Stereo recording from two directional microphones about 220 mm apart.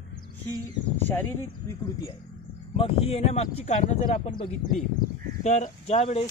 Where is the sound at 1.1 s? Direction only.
10° left (ahead or behind).